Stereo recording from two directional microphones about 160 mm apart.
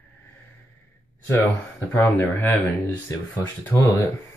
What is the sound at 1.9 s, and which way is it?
Speech, 15° left (ahead or behind).